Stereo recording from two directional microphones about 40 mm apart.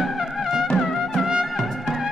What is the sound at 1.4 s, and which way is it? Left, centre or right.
Trumpet, centre.